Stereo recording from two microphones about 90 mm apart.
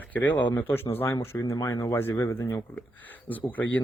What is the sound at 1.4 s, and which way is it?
Speech, 40° left (ahead or behind).